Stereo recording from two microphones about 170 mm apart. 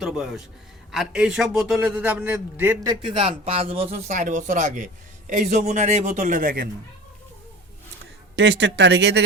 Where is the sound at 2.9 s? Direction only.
30° right (ahead or behind); by 6.6 s 55° right (ahead or behind).